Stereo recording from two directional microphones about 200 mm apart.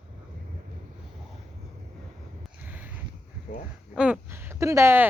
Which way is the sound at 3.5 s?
40° left (ahead or behind).